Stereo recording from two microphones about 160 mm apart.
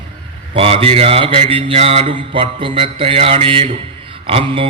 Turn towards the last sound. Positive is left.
turn(degrees=-35)  # may be behind; listen again after turning